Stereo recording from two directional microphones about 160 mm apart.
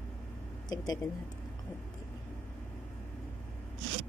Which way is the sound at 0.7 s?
25° left (ahead or behind).